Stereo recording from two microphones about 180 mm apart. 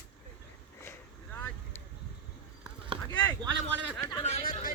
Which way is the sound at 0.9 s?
10° left (ahead or behind).